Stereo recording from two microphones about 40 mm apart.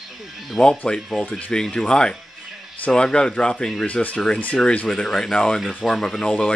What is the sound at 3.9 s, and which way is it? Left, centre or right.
Speech, left.